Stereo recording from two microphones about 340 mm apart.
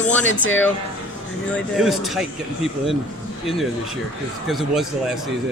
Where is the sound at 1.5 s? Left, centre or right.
Centre.